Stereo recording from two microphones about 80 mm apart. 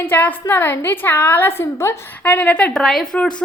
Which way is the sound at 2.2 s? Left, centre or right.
Centre.